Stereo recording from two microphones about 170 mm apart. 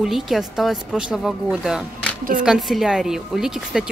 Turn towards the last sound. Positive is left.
turn(degrees=-5)  # may be behind; listen again after turning